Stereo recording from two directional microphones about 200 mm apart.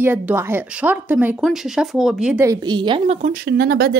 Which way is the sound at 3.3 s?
50° right (ahead or behind).